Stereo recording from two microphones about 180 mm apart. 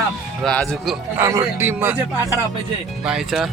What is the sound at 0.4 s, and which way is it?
Speech, 5° left (ahead or behind).